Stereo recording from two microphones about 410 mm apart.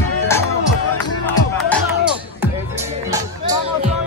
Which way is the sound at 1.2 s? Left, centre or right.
Centre.